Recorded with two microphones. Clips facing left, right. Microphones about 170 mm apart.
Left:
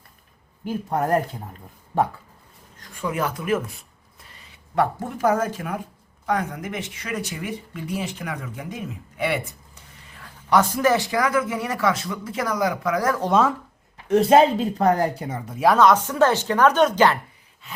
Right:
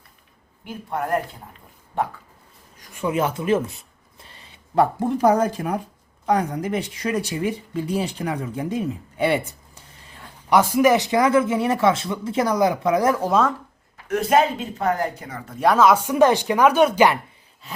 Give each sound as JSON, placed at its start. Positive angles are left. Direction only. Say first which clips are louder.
{"t": 0.6, "sound": "speech", "louder": "left 4 dB", "side_deg": 40}
{"t": 2.9, "sound": "speech", "louder": "right 3 dB", "side_deg": -20}
{"t": 10.5, "sound": "speech", "louder": "right 3 dB", "side_deg": -15}
{"t": 13.2, "sound": "speech", "louder": "even", "side_deg": 0}
{"t": 13.9, "sound": "a woman's voice", "louder": "left 3 dB", "side_deg": 30}
{"t": 15.4, "sound": "speech", "louder": "even", "side_deg": 5}